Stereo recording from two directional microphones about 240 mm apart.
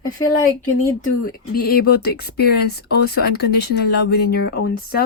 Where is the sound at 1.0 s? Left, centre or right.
Left.